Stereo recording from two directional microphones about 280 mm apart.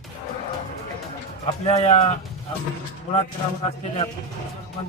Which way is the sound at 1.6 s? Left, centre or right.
Left.